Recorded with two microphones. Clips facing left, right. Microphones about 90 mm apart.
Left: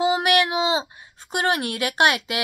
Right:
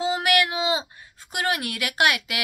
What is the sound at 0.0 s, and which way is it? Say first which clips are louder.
A woman's voice: left 3 dB; 20° left (ahead or behind).